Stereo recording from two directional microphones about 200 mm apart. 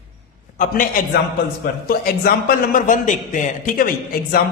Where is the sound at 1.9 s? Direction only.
50° left (ahead or behind).